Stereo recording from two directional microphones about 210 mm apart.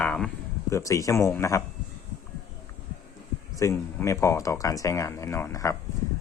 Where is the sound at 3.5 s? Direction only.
15° left (ahead or behind).